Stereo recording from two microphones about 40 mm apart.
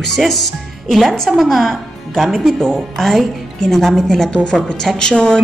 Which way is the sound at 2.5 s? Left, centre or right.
Centre.